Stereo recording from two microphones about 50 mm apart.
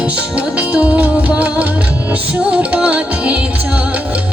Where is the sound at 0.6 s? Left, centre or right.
Right.